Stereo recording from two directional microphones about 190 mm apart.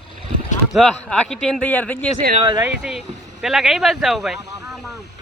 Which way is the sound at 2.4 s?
25° right (ahead or behind).